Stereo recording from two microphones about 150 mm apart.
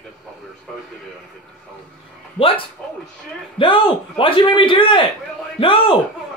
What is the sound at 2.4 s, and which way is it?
Speech, 35° left (ahead or behind).